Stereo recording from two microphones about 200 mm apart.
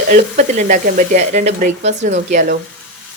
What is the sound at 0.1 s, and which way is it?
A woman's voice, 35° right (ahead or behind).